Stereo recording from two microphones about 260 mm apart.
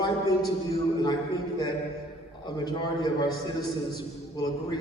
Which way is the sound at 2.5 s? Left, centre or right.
Centre.